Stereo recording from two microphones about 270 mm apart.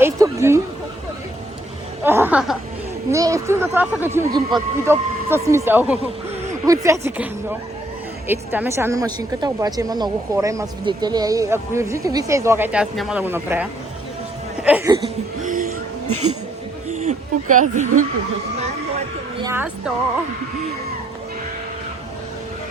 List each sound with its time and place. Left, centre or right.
0.0 s a sound: centre
2.0 s chuckle: centre
3.1 s a woman's voice: centre
8.3 s a woman's voice: centre
14.6 s a sound: centre
15.4 s music: right
17.0 s speech: right
19.4 s speech: centre